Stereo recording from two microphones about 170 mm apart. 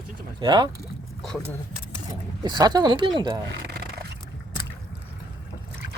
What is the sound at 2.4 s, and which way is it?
Speech, 25° right (ahead or behind).